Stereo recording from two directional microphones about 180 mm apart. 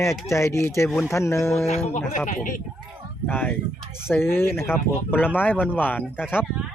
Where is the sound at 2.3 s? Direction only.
50° left (ahead or behind).